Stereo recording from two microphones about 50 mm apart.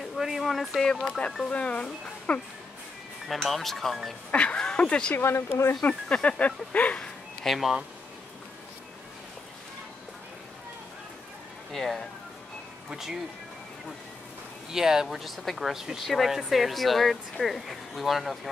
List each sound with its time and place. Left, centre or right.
0.1 s speech: centre
0.8 s speech: centre
1.5 s speech: left
3.3 s speech: centre
4.3 s speech: left
5.1 s speech: left
6.1 s speech: centre
7.4 s speech: centre
11.7 s speech: centre
12.9 s speech: centre
14.7 s speech: centre